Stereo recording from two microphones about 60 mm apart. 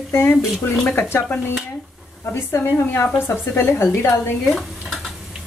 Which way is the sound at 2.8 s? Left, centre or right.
Left.